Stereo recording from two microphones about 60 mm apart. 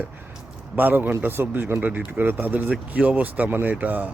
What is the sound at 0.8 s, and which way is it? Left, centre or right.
Speech, right.